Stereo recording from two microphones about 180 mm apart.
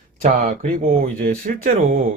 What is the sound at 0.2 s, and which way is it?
Speech, 45° right (ahead or behind).